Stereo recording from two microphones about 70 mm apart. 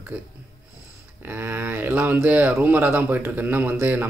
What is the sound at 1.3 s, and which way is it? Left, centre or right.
Speech, right.